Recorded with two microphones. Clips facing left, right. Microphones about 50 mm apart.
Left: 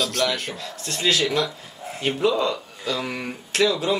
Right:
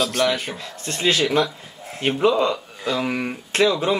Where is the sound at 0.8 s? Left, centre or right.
Right.